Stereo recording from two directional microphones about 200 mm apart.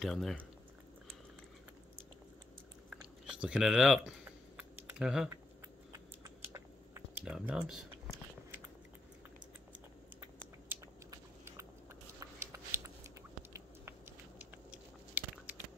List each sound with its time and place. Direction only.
0.0 s speech: centre (ahead or behind)
2.9 s chewing: 5° right (ahead or behind)
4.2 s typing: 5° right (ahead or behind)
5.9 s typing: 15° right (ahead or behind)
7.2 s speech: 5° right (ahead or behind)
10.7 s biting: 15° right (ahead or behind)
15.1 s a sound: 5° right (ahead or behind)